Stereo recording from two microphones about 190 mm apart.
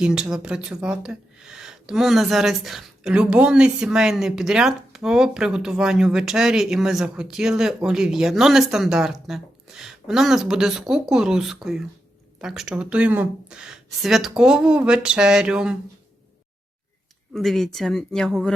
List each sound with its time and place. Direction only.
0.0 s speech: 5° right (ahead or behind)
17.3 s speech: centre (ahead or behind)